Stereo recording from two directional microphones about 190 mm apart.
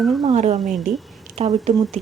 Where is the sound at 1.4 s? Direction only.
30° right (ahead or behind).